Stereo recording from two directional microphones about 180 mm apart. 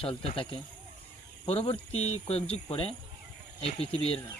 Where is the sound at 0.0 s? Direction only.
30° left (ahead or behind).